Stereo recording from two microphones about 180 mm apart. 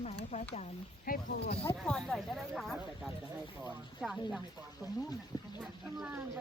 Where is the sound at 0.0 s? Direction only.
35° left (ahead or behind).